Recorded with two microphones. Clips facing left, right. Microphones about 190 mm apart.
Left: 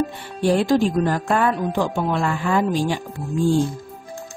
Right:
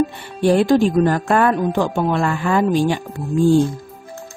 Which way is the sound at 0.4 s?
60° right (ahead or behind).